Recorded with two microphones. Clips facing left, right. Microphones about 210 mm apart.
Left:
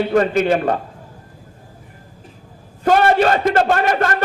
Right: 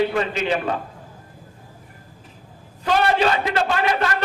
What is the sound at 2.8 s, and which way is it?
A man's voice, 50° left (ahead or behind).